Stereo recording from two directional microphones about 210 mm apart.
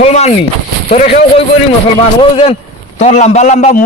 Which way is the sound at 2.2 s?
30° left (ahead or behind).